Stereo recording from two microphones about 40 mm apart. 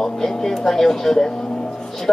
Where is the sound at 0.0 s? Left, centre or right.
Centre.